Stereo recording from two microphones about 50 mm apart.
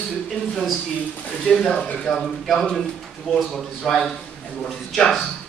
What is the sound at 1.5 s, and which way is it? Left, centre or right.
Speech, left.